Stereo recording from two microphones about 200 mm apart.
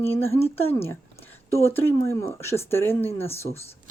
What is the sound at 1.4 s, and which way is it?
Speech, 10° left (ahead or behind).